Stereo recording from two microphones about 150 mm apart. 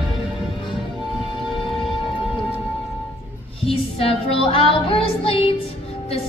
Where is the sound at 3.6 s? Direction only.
40° left (ahead or behind).